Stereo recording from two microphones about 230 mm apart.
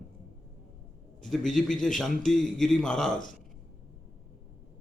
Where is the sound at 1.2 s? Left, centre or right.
Centre.